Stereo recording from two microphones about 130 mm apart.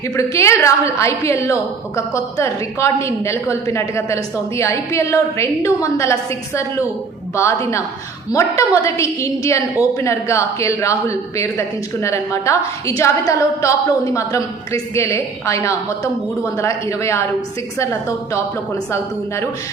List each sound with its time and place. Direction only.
0.2 s a woman's voice: 20° left (ahead or behind)